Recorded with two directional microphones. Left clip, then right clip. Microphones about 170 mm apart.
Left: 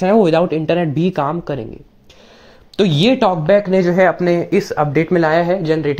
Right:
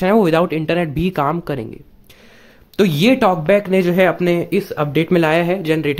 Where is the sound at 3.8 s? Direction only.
30° right (ahead or behind).